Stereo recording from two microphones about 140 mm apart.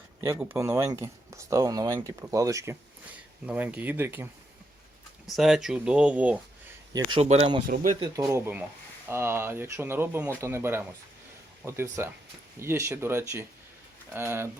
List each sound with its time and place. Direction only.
0.2 s speech: 15° right (ahead or behind)
3.4 s speech: 10° right (ahead or behind)
5.2 s speech: centre (ahead or behind)
7.2 s speech: 50° right (ahead or behind)
7.7 s speech: 90° right
8.1 s speech: 25° right (ahead or behind)